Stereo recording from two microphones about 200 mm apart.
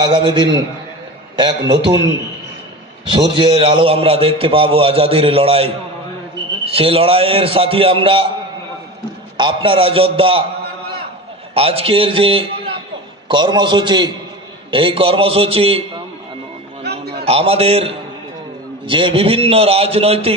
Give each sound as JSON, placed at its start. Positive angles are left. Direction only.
{"t": 0.0, "sound": "a man's voice", "side_deg": -20}
{"t": 3.1, "sound": "a man's voice", "side_deg": -25}
{"t": 9.4, "sound": "a man's voice", "side_deg": -25}
{"t": 11.5, "sound": "a man's voice", "side_deg": -30}
{"t": 16.8, "sound": "a sound", "side_deg": -55}
{"t": 17.2, "sound": "a man's voice", "side_deg": -30}